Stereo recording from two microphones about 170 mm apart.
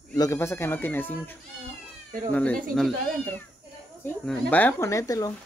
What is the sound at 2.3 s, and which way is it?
Speech, 10° left (ahead or behind).